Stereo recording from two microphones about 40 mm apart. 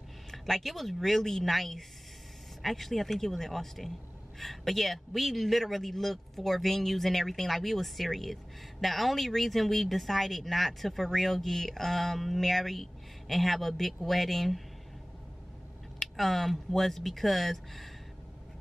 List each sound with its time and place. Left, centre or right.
0.3 s a man's voice: centre
16.0 s a man's voice: centre